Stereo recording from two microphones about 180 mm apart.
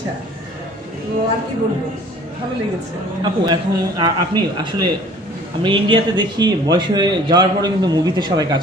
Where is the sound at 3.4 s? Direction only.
25° right (ahead or behind).